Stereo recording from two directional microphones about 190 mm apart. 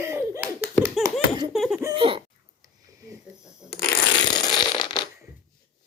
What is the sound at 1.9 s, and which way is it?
Speech, 25° right (ahead or behind).